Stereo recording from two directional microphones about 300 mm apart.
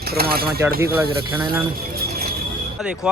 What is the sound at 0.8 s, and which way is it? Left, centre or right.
Speech, centre.